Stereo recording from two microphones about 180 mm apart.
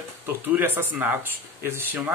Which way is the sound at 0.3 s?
10° right (ahead or behind).